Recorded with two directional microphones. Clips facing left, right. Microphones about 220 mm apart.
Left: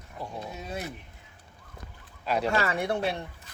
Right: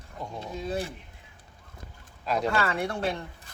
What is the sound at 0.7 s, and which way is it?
Speech, 30° right (ahead or behind).